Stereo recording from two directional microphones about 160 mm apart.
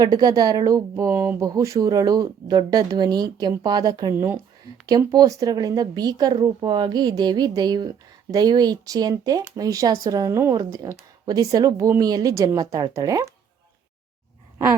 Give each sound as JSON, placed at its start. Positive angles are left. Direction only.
{"t": 0.0, "sound": "speech", "side_deg": -25}
{"t": 4.1, "sound": "speech", "side_deg": -15}